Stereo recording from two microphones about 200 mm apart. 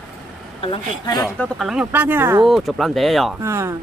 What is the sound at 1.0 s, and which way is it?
Speech, 20° left (ahead or behind).